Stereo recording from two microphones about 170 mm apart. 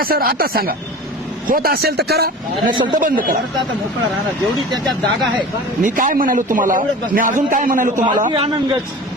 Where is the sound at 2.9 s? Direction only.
55° right (ahead or behind).